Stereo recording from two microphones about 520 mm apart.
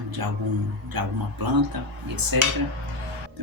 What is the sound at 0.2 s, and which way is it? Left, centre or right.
Speech, right.